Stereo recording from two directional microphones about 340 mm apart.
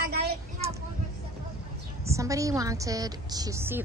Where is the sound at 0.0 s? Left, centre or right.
Right.